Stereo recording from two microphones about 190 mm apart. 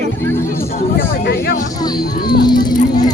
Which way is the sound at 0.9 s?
55° left (ahead or behind).